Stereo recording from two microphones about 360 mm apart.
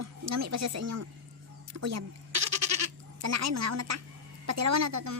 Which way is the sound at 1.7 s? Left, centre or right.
Right.